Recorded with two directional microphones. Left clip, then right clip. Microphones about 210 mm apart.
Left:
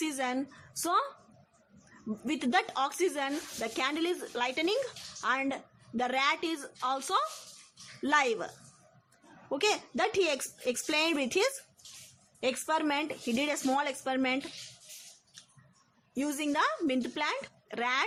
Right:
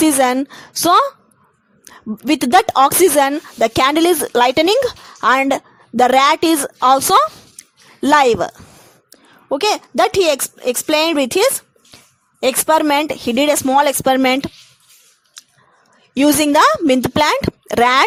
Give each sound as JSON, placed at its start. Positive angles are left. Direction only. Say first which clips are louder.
{"t": 0.0, "sound": "speech", "louder": "right 19 dB", "side_deg": -45}
{"t": 2.2, "sound": "speech", "louder": "right 18 dB", "side_deg": -45}
{"t": 16.1, "sound": "speech", "louder": "right 19 dB", "side_deg": -40}